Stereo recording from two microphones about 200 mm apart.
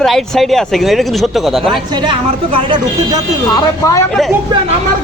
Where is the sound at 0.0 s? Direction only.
Centre (ahead or behind).